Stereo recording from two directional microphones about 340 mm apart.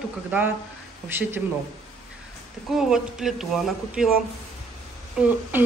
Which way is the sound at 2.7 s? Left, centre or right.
Centre.